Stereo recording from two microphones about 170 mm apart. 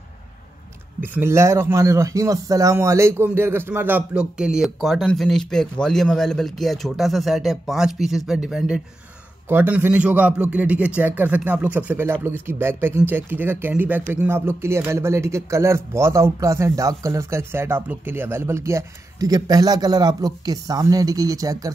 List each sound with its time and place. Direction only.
1.0 s speech: 15° right (ahead or behind)